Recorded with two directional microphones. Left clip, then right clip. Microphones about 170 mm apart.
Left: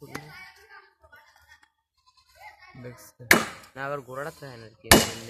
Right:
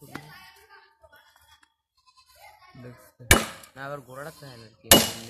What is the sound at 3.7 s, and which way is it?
Speech, 30° left (ahead or behind).